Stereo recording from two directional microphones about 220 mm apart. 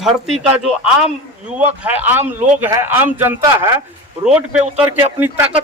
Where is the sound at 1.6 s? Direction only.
10° right (ahead or behind).